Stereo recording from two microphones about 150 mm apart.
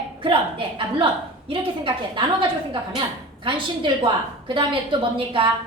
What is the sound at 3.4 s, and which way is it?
A woman's voice, 35° right (ahead or behind).